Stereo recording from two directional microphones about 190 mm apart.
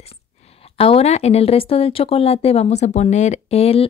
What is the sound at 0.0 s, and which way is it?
Speech, 30° left (ahead or behind).